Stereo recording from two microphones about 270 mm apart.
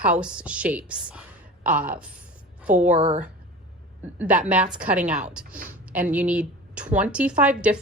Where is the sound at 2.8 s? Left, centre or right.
Right.